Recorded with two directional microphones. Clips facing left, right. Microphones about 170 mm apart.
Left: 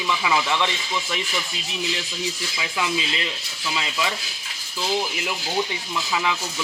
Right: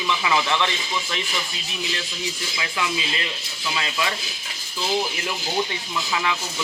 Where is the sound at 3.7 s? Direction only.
15° left (ahead or behind).